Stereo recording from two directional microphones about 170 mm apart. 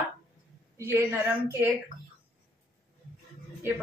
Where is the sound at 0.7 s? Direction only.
15° right (ahead or behind).